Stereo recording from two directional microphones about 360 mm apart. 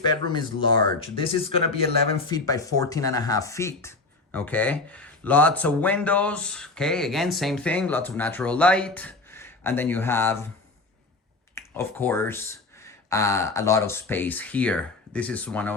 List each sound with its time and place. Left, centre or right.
0.0 s speech: centre
11.5 s speech: centre